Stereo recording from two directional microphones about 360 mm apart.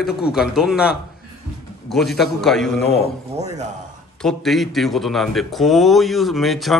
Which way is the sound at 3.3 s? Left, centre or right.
Centre.